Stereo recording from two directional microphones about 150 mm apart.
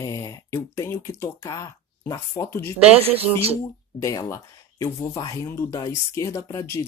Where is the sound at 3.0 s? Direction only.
40° right (ahead or behind).